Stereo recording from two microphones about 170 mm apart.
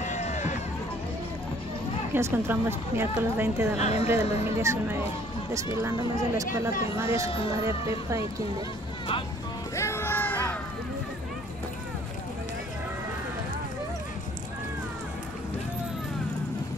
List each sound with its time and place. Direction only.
0.0 s run: 45° left (ahead or behind)
2.1 s a woman's voice: 15° right (ahead or behind)
3.7 s a woman's voice: 40° left (ahead or behind)
4.1 s a woman's voice: 15° right (ahead or behind)
6.3 s a woman's voice: 20° right (ahead or behind)
7.2 s a woman's voice: 30° left (ahead or behind)
7.6 s a woman's voice: 15° right (ahead or behind)
9.8 s a sound: 15° left (ahead or behind)